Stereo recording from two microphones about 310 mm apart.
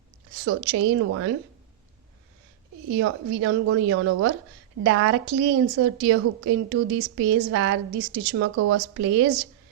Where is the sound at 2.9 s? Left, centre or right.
Right.